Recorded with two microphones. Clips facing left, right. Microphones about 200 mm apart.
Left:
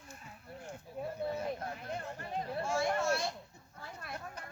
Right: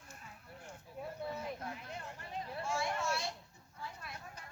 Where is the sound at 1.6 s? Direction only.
45° left (ahead or behind).